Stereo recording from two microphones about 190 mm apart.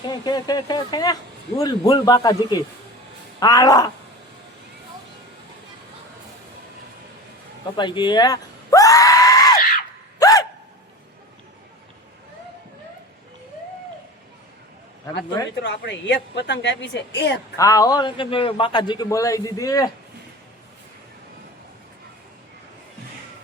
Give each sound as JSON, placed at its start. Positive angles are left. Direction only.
{"t": 0.1, "sound": "a man's voice", "side_deg": 20}
{"t": 7.8, "sound": "speech", "side_deg": 25}
{"t": 10.2, "sound": "gasp", "side_deg": 20}
{"t": 15.6, "sound": "a woman's voice", "side_deg": 70}
{"t": 17.6, "sound": "a man's voice", "side_deg": 15}